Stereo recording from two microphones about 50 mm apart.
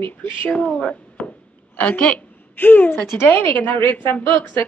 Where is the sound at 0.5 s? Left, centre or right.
Left.